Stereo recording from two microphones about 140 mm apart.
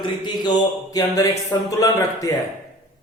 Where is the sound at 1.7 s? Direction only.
25° left (ahead or behind).